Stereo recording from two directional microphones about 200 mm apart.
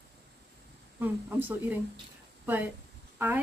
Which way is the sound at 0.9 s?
10° right (ahead or behind).